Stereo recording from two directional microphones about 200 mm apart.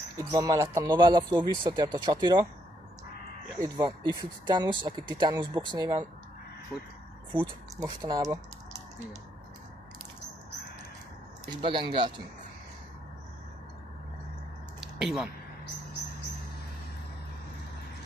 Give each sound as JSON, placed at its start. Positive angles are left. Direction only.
{"t": 0.2, "sound": "speech", "side_deg": -20}
{"t": 3.5, "sound": "speech", "side_deg": -15}
{"t": 6.7, "sound": "speech", "side_deg": -5}
{"t": 7.3, "sound": "speech", "side_deg": -15}
{"t": 11.4, "sound": "speech", "side_deg": -25}
{"t": 14.8, "sound": "a sound", "side_deg": -5}